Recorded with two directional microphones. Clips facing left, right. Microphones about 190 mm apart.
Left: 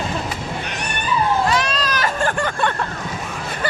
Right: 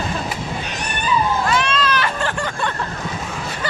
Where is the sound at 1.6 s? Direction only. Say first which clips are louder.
Right 2 dB; 40° left (ahead or behind).